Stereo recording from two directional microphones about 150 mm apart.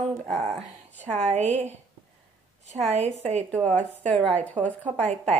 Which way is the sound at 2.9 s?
45° right (ahead or behind).